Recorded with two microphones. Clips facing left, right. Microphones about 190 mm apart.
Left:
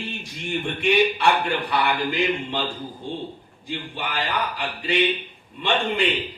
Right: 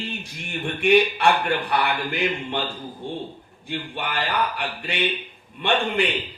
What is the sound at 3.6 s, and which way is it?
Speech, 65° right (ahead or behind).